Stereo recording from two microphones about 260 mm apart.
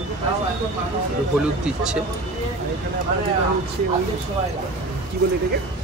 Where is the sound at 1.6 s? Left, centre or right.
Centre.